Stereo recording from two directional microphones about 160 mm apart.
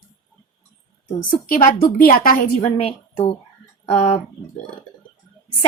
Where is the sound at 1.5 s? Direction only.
65° left (ahead or behind).